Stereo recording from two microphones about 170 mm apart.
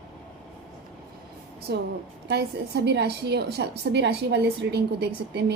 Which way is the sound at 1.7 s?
80° right.